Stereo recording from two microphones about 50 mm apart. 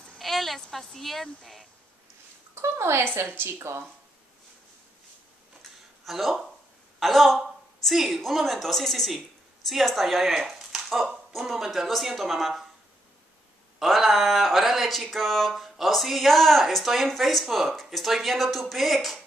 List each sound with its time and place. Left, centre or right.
0.2 s speech: centre
2.5 s speech: right
3.5 s speech: right
5.6 s a sound: centre
7.0 s speech: centre
13.7 s speech: centre